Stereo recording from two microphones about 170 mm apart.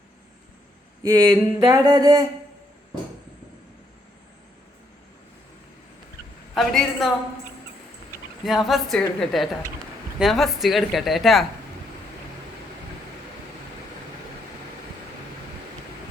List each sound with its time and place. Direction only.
1.0 s a sound: 20° right (ahead or behind)
6.5 s speech: centre (ahead or behind)
8.4 s speech: centre (ahead or behind)